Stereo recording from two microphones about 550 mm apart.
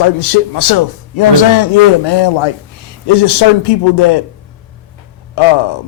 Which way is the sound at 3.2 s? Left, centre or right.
Left.